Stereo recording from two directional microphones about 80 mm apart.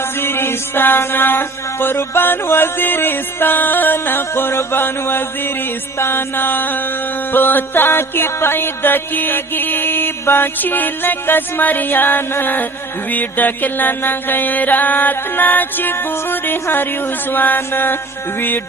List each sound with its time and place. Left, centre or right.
0.2 s music: left